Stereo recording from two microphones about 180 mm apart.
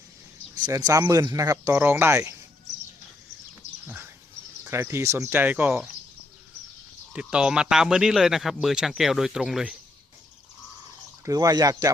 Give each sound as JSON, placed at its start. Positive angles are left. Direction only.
{"t": 0.5, "sound": "speech", "side_deg": -20}
{"t": 3.8, "sound": "a sound", "side_deg": -10}
{"t": 4.6, "sound": "speech", "side_deg": -15}
{"t": 7.1, "sound": "speech", "side_deg": -5}
{"t": 11.3, "sound": "speech", "side_deg": -20}